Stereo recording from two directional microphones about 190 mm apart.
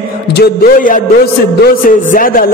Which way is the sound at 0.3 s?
55° left (ahead or behind).